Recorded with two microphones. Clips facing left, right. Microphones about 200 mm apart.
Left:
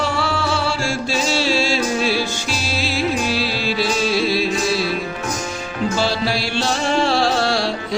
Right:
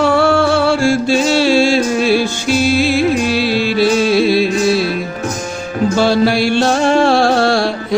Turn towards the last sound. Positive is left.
turn(degrees=-55)  # may be behind; listen again after turning